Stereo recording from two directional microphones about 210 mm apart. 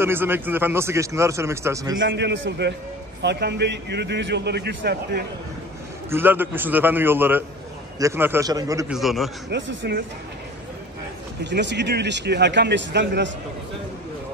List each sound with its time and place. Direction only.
0.0 s a man's voice: 10° right (ahead or behind)
2.0 s speech: 55° right (ahead or behind)
6.0 s a man's voice: 10° right (ahead or behind)
8.9 s a man's voice: centre (ahead or behind)
9.5 s speech: 60° right (ahead or behind)
11.4 s speech: 55° right (ahead or behind)